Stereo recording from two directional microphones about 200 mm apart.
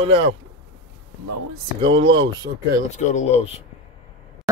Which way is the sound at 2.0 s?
65° right (ahead or behind).